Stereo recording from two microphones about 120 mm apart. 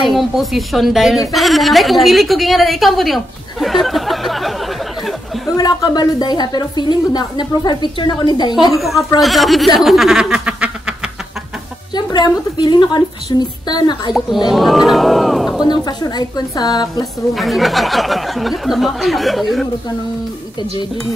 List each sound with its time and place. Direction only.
0.0 s a woman's voice: centre (ahead or behind)
5.6 s a woman's voice: 35° left (ahead or behind)
8.7 s a woman's voice: centre (ahead or behind)
9.8 s a sound: centre (ahead or behind)
11.9 s a woman's voice: 35° left (ahead or behind)
14.5 s a woman's voice: centre (ahead or behind)
15.6 s a woman's voice: 35° left (ahead or behind)
17.3 s a woman's voice: centre (ahead or behind)